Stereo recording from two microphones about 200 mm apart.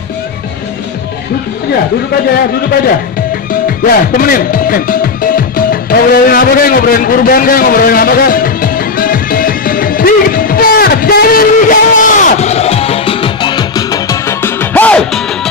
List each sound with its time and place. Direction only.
3.6 s music: 45° left (ahead or behind); by 15.2 s 5° left (ahead or behind)